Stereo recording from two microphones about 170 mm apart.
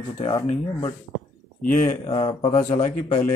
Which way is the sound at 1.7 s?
50° left (ahead or behind).